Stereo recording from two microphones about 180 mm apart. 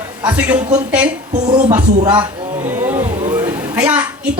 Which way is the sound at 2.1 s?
10° right (ahead or behind).